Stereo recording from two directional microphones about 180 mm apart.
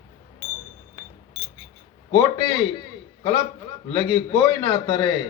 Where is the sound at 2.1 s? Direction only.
25° left (ahead or behind).